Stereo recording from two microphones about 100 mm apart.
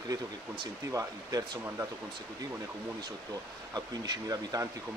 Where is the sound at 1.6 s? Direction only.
25° right (ahead or behind).